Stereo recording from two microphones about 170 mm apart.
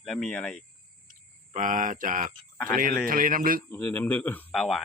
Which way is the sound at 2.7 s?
55° right (ahead or behind).